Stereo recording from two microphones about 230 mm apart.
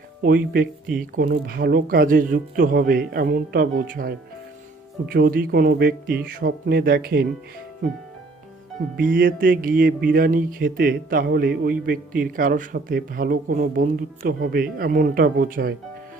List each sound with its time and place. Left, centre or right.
0.2 s speech: right
9.0 s speech: right